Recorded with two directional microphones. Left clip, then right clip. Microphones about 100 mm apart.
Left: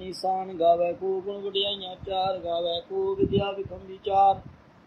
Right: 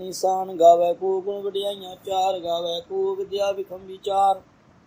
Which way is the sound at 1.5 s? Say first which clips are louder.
Even; 90° right.